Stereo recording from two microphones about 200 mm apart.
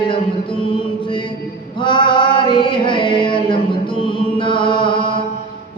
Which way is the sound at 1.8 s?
25° left (ahead or behind).